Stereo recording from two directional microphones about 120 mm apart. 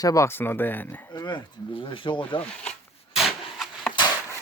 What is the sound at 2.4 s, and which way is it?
Speech, 10° left (ahead or behind).